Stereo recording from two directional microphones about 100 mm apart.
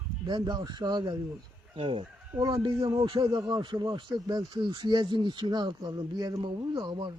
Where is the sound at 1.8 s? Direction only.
65° right (ahead or behind).